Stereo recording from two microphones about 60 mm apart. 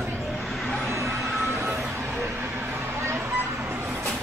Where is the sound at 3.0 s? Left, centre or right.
Right.